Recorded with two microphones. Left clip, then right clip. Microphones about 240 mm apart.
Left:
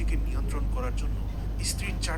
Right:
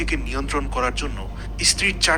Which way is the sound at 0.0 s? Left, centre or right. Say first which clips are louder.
Right 13 dB; right.